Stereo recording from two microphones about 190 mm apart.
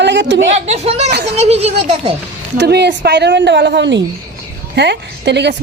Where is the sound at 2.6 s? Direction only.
60° right (ahead or behind).